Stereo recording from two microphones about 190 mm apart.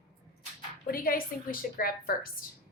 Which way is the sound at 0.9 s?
50° left (ahead or behind).